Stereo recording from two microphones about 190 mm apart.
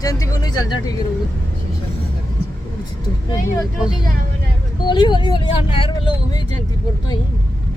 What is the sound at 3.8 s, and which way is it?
Speech, 5° right (ahead or behind).